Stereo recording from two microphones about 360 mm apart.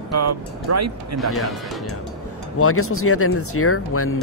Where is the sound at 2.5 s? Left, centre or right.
Left.